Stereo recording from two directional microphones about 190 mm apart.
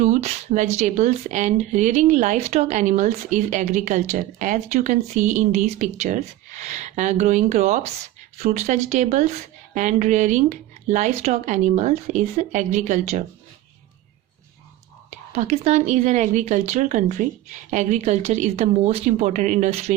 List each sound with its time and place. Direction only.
0.0 s speech: 35° right (ahead or behind)
15.4 s speech: 35° right (ahead or behind)